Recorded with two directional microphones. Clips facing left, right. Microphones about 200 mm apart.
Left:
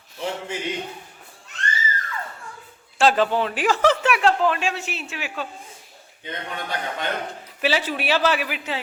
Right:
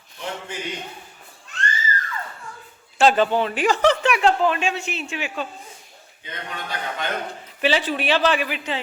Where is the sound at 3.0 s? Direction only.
Centre (ahead or behind).